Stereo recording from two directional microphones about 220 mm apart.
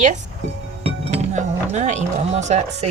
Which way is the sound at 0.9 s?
30° right (ahead or behind).